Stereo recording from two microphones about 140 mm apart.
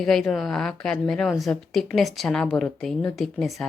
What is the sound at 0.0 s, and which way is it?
A woman's voice, 5° left (ahead or behind).